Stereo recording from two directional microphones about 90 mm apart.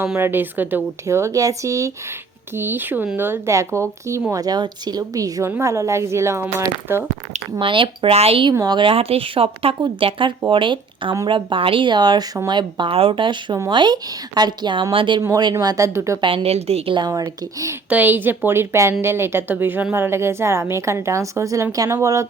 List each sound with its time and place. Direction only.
0.2 s speech: 25° right (ahead or behind)
1.0 s speech: 35° right (ahead or behind)
2.6 s speech: 25° right (ahead or behind)
4.3 s speech: 45° right (ahead or behind); by 7.0 s 25° right (ahead or behind)
7.6 s speech: 70° right (ahead or behind)
8.6 s speech: 55° right (ahead or behind)
8.9 s speech: 90° right
10.5 s speech: 65° right (ahead or behind)
13.7 s speech: 60° right (ahead or behind)
15.6 s speech: 45° right (ahead or behind)
16.2 s speech: 90° right
17.2 s speech: 30° right (ahead or behind)
17.8 s speech: 20° right (ahead or behind); by 22.3 s 35° right (ahead or behind)